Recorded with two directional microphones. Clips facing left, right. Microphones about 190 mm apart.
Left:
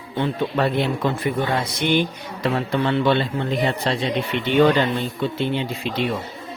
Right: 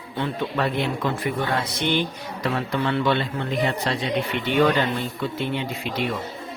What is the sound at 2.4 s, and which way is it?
Speech, 30° left (ahead or behind).